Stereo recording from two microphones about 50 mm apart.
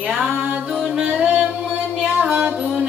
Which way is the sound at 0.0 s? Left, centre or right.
Right.